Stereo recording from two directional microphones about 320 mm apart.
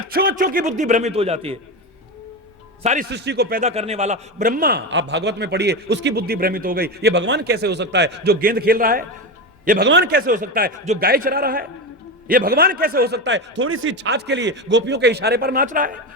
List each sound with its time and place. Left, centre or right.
0.1 s a man's voice: right
2.8 s a man's voice: right